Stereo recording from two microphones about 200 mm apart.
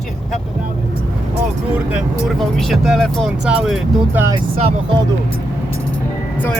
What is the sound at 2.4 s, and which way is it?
Speech, centre (ahead or behind).